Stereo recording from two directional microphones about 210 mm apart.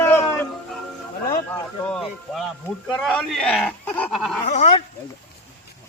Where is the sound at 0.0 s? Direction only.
10° left (ahead or behind).